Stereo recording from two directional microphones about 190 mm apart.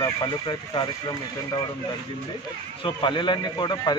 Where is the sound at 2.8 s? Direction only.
25° left (ahead or behind).